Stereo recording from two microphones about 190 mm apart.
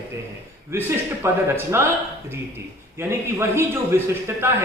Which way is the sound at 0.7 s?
15° right (ahead or behind).